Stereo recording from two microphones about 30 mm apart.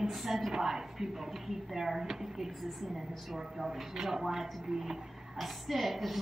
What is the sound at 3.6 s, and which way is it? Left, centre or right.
A woman's voice, centre.